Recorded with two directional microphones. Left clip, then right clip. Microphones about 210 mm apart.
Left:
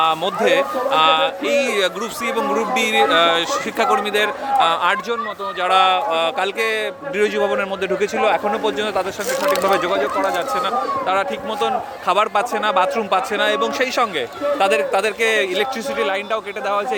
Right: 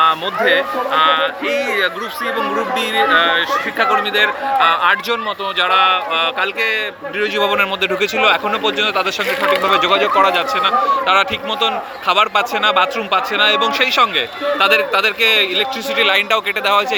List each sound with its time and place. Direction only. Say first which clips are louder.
0.0 s speech: right 3 dB; 20° left (ahead or behind)
2.7 s speech: right 1 dB; 25° left (ahead or behind)
7.3 s a man's voice: right 4 dB; 5° left (ahead or behind)
9.9 s speech: right 6 dB; 15° right (ahead or behind)
10.3 s a man's voice: right 5 dB; 5° left (ahead or behind)
16.0 s a man's voice: right 8 dB; centre (ahead or behind)